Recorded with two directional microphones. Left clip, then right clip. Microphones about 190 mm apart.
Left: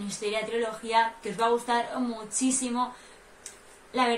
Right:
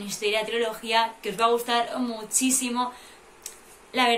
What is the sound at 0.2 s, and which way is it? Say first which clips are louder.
A woman's voice: right 4 dB; 5° left (ahead or behind).